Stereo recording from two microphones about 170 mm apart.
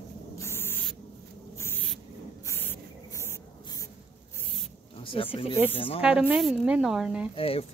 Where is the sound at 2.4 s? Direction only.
15° left (ahead or behind).